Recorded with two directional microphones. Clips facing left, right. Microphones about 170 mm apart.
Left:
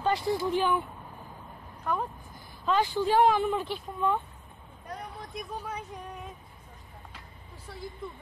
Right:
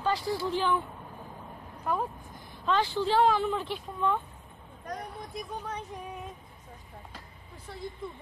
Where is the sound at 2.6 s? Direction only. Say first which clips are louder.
Left 1 dB; 10° left (ahead or behind).